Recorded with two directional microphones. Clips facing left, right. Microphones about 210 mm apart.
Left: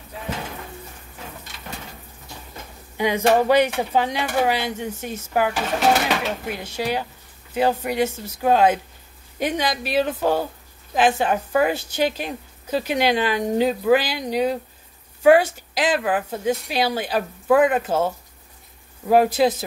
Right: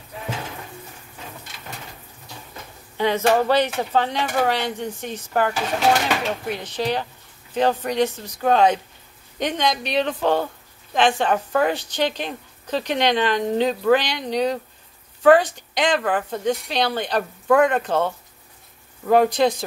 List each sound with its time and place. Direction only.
3.0 s a woman's voice: 15° left (ahead or behind)